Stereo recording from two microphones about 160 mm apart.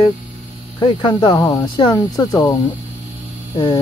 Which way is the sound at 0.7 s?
30° left (ahead or behind).